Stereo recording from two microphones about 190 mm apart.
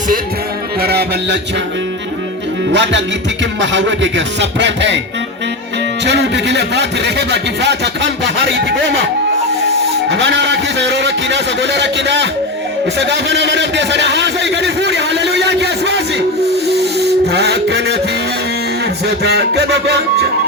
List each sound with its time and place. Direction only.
0.8 s music: 55° right (ahead or behind)
2.7 s a man's voice: 65° right (ahead or behind)
6.1 s speech: 65° right (ahead or behind)
10.1 s a man's voice: 70° right (ahead or behind)
17.3 s speech: 60° right (ahead or behind)
19.0 s speech: 60° right (ahead or behind)